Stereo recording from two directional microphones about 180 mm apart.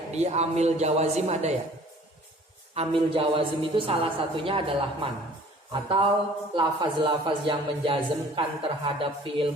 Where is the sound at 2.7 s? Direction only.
30° right (ahead or behind).